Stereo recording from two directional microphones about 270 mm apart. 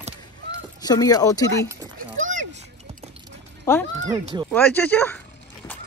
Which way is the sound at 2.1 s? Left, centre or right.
Right.